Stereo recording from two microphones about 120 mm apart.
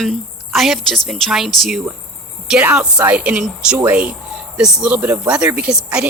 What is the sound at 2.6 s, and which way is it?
A woman's voice, 15° right (ahead or behind).